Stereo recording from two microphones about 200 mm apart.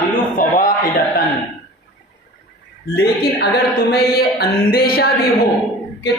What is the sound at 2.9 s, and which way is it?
A man's voice, 55° left (ahead or behind).